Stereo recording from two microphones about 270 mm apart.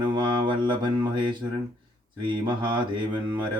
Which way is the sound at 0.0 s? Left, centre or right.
Centre.